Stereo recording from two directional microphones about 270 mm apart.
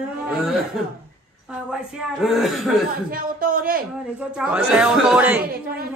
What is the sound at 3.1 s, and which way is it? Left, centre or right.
Speech, right.